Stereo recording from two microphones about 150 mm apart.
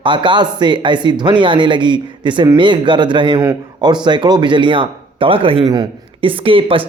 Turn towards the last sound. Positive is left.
turn(degrees=-35)  # may be behind; listen again after turning